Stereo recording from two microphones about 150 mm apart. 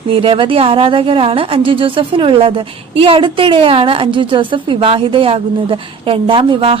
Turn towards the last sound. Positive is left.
turn(degrees=-35)  # may be behind; listen again after turning